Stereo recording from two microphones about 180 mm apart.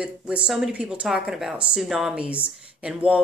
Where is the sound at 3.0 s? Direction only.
10° right (ahead or behind).